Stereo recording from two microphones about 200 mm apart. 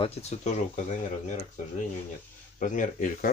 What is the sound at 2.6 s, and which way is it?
Speech, 40° left (ahead or behind).